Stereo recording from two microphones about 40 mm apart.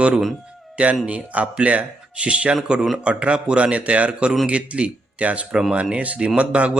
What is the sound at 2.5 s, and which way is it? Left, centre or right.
A man's voice, centre.